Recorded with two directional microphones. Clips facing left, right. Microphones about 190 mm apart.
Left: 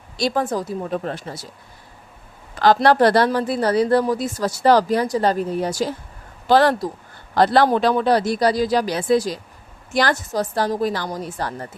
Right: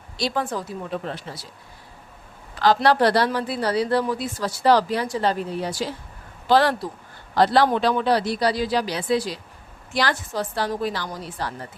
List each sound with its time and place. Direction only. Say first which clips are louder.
0.2 s a woman's voice: left 4 dB; 45° left (ahead or behind)
2.6 s a woman's voice: left 3 dB; 50° left (ahead or behind)